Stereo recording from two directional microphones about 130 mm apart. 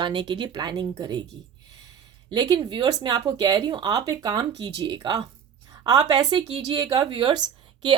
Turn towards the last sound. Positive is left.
turn(degrees=-35)  # may be behind; listen again after turning